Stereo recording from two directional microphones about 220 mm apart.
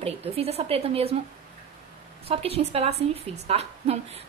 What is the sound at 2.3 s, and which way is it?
A woman's voice, 25° right (ahead or behind).